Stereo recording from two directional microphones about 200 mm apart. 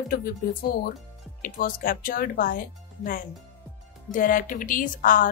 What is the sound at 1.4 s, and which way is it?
Speech, 45° left (ahead or behind).